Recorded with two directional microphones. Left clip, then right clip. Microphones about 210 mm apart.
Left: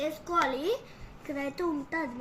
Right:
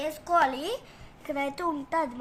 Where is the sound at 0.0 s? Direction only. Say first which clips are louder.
Right 4 dB; 60° right (ahead or behind).